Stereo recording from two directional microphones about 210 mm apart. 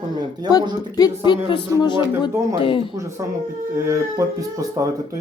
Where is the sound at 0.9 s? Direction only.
20° left (ahead or behind).